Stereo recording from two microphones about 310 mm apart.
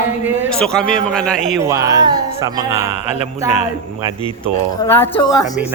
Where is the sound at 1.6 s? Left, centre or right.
Centre.